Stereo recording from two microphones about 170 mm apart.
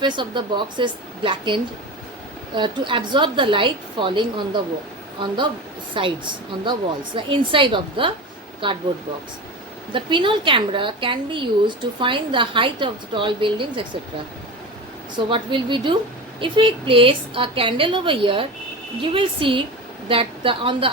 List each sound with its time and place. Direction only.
0.0 s a woman's voice: 25° right (ahead or behind)
5.9 s a woman's voice: 30° right (ahead or behind)
9.9 s a woman's voice: 30° right (ahead or behind)
15.1 s a woman's voice: 30° right (ahead or behind)